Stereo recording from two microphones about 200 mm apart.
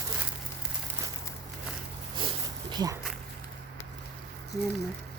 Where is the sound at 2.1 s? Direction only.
25° right (ahead or behind).